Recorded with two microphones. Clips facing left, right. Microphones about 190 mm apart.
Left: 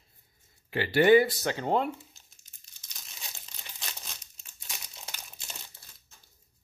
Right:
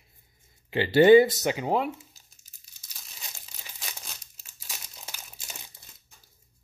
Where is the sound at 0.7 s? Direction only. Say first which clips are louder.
Right 4 dB; 25° right (ahead or behind).